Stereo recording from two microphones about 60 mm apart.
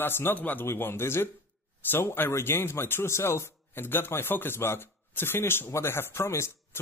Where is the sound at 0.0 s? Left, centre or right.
Left.